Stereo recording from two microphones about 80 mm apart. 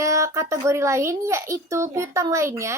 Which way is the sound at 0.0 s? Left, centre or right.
Right.